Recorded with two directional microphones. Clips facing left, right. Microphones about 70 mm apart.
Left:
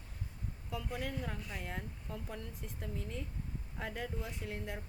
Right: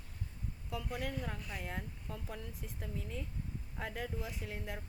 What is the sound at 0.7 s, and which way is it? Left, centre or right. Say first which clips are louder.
Speech: even; centre.